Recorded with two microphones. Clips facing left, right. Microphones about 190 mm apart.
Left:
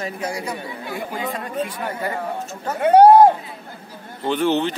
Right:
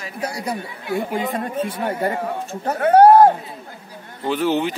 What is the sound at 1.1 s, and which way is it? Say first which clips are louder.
Speech: right 3 dB; 25° right (ahead or behind).